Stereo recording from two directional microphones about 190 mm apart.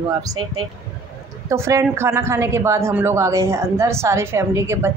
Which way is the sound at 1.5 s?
15° right (ahead or behind).